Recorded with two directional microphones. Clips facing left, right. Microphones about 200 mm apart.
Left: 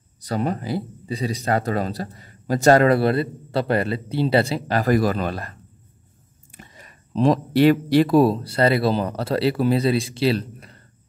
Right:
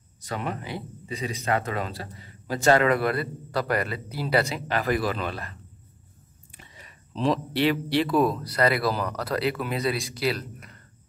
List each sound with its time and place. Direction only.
0.2 s speech: 35° left (ahead or behind)